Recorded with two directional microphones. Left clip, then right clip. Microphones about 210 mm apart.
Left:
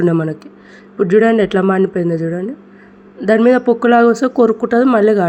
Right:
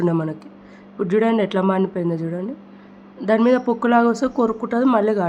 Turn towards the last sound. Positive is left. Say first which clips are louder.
# left 7 dB
turn(degrees=15)  # may be behind; listen again after turning